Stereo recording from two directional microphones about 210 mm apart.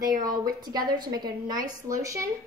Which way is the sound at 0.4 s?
20° right (ahead or behind).